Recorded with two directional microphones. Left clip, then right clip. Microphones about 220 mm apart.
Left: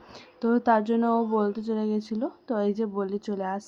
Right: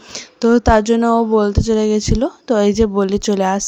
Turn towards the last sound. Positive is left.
turn(degrees=-40)  # may be behind; listen again after turning